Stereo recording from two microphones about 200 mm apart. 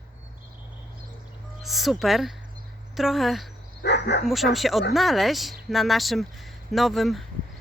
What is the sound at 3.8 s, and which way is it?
Speech, 60° left (ahead or behind).